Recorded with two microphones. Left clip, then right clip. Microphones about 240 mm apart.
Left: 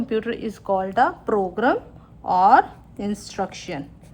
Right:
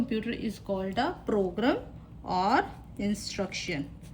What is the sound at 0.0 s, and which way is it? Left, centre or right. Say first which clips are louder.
A woman's voice: left 8 dB; centre.